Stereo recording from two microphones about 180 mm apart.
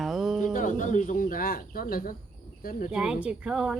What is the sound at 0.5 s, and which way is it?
Speech, 45° left (ahead or behind).